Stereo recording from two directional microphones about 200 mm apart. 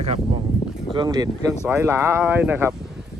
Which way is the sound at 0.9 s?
20° right (ahead or behind).